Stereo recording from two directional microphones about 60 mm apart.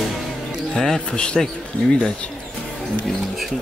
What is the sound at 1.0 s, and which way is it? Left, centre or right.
Speech, centre.